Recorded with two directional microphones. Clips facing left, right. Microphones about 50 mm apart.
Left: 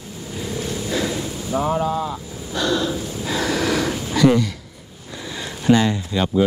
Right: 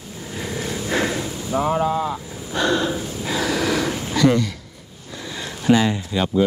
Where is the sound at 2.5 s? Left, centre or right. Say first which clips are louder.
Right 1 dB; right.